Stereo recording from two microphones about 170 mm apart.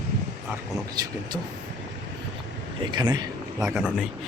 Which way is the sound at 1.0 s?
25° right (ahead or behind).